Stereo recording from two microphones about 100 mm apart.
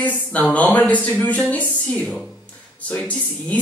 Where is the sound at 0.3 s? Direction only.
15° left (ahead or behind).